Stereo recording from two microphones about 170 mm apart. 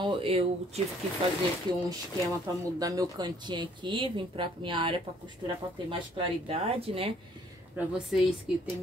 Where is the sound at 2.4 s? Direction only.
20° right (ahead or behind).